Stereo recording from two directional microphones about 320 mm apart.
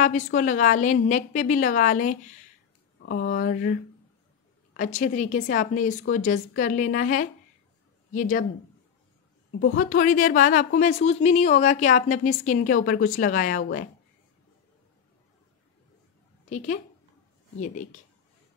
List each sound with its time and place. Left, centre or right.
0.0 s a woman's voice: left
4.7 s a woman's voice: left
9.5 s a woman's voice: left
16.4 s a woman's voice: left